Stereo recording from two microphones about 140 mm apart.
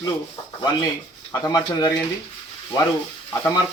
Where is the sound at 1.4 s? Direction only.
25° left (ahead or behind).